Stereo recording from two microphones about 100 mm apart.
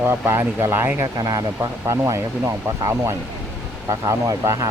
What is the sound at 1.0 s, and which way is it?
Speech, 35° right (ahead or behind).